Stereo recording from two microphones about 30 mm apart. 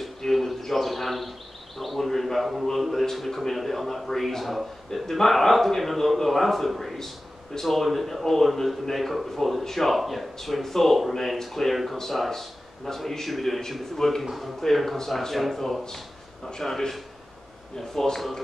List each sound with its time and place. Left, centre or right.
0.2 s a sound: centre
1.8 s a man's voice: centre
11.7 s a man's voice: centre
12.3 s a man's voice: centre
16.4 s speech: centre
18.0 s a man's voice: centre